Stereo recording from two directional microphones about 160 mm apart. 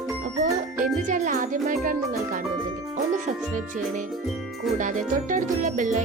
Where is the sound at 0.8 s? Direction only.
55° right (ahead or behind).